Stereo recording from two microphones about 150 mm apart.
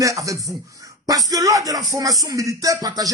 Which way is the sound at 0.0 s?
20° right (ahead or behind).